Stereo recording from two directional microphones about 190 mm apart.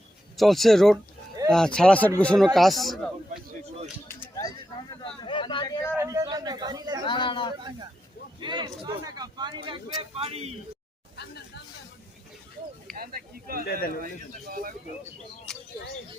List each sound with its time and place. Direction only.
0.3 s speech: centre (ahead or behind)
4.1 s a sound: 15° left (ahead or behind)
6.0 s a man's voice: 15° right (ahead or behind)
7.0 s a man's voice: 25° left (ahead or behind)
8.4 s speech: 25° right (ahead or behind)
11.2 s hubbub: 60° left (ahead or behind)
12.9 s speech: 50° right (ahead or behind)
15.5 s a sound: 5° left (ahead or behind)